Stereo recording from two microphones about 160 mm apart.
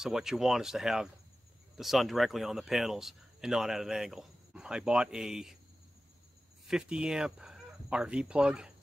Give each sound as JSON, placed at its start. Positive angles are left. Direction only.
{"t": 0.0, "sound": "speech", "side_deg": -5}
{"t": 6.7, "sound": "speech", "side_deg": -5}